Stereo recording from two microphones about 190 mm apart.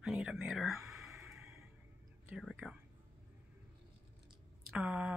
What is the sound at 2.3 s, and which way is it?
Speech, centre (ahead or behind).